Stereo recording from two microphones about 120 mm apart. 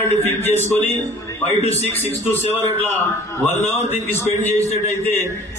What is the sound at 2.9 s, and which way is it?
Speech, 20° left (ahead or behind).